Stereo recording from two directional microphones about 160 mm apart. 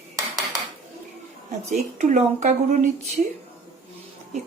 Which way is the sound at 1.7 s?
50° right (ahead or behind).